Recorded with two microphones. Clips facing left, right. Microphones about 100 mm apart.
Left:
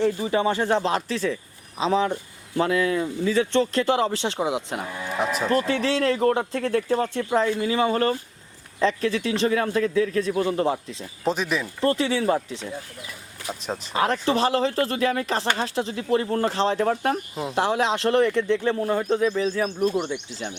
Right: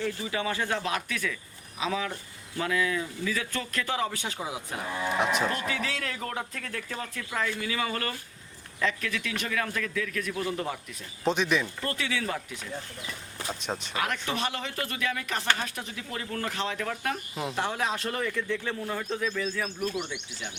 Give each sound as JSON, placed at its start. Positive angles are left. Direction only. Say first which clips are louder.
{"t": 0.0, "sound": "a man's voice", "louder": "left 9 dB", "side_deg": 30}
{"t": 5.1, "sound": "speech", "louder": "left 2 dB", "side_deg": 0}
{"t": 5.5, "sound": "a man's voice", "louder": "left 9 dB", "side_deg": 35}
{"t": 11.3, "sound": "speech", "louder": "left 1 dB", "side_deg": 0}
{"t": 11.8, "sound": "a man's voice", "louder": "left 9 dB", "side_deg": 30}
{"t": 12.7, "sound": "speech", "louder": "left 2 dB", "side_deg": 5}
{"t": 13.9, "sound": "a man's voice", "louder": "left 10 dB", "side_deg": 30}
{"t": 17.8, "sound": "speech", "louder": "left 10 dB", "side_deg": 80}
{"t": 18.3, "sound": "speech", "louder": "left 9 dB", "side_deg": 25}
{"t": 19.9, "sound": "a man's voice", "louder": "left 8 dB", "side_deg": 40}